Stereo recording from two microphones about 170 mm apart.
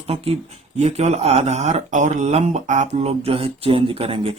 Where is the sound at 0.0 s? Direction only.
35° right (ahead or behind).